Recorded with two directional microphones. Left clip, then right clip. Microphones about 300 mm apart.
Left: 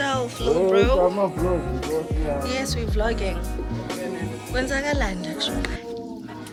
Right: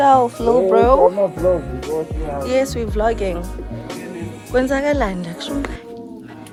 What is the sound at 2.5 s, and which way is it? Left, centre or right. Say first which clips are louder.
Speech: right 9 dB; centre.